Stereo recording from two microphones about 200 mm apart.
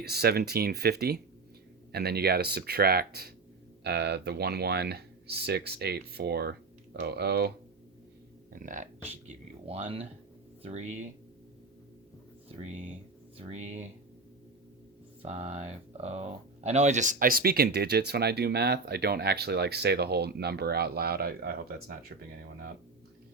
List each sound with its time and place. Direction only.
0.0 s speech: 50° right (ahead or behind)
8.5 s speech: 40° right (ahead or behind)
12.5 s speech: 35° right (ahead or behind)
15.2 s speech: 35° right (ahead or behind); by 21.9 s 50° right (ahead or behind)